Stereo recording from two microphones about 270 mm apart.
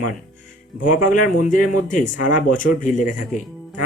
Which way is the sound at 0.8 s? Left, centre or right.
Left.